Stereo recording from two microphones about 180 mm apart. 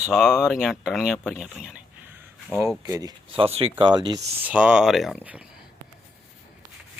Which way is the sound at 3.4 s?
35° right (ahead or behind).